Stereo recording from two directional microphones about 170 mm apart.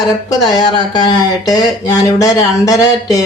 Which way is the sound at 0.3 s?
25° left (ahead or behind).